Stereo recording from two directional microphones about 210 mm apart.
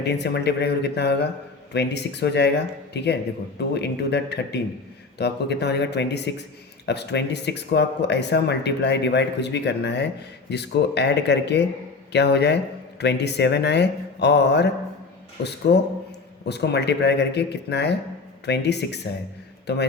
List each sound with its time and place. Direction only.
0.0 s a man's voice: 55° left (ahead or behind)